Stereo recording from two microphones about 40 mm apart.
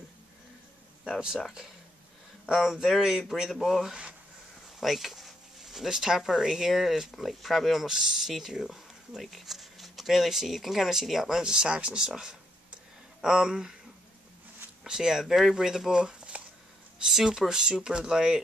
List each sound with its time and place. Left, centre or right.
1.2 s speech: centre
4.7 s a sound: centre
5.6 s speech: centre
7.8 s speech: centre
11.4 s speech: right
14.8 s speech: centre
16.0 s a sound: right
17.0 s speech: centre